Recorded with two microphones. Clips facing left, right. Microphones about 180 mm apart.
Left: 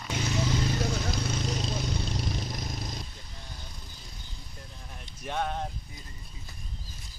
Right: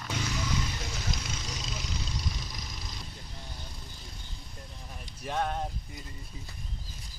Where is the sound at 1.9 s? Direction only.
55° left (ahead or behind).